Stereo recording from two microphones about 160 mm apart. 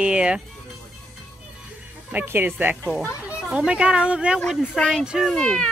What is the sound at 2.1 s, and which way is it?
A woman's voice, 10° right (ahead or behind).